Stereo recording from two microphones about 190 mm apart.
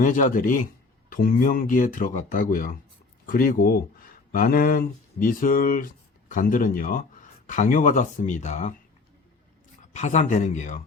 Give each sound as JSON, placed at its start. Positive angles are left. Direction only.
{"t": 0.0, "sound": "speech", "side_deg": 40}
{"t": 9.9, "sound": "speech", "side_deg": 40}